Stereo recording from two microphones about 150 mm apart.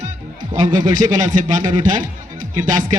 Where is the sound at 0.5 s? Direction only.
25° right (ahead or behind).